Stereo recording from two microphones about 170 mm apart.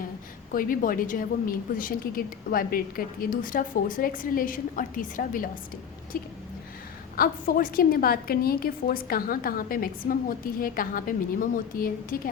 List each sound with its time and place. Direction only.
0.5 s a woman's voice: 55° left (ahead or behind)